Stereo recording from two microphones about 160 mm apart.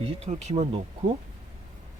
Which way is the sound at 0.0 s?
40° right (ahead or behind).